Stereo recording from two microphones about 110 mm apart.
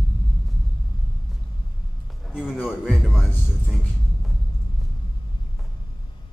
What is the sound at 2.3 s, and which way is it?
Music, 5° right (ahead or behind).